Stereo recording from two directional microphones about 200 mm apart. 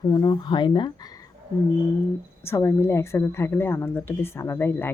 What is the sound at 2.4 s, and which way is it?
Speech, 10° left (ahead or behind).